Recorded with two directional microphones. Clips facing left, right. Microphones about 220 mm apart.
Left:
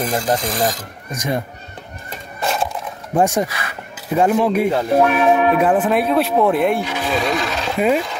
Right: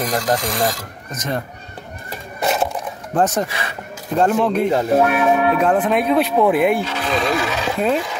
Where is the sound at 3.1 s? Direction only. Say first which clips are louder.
Left 2 dB; 10° left (ahead or behind).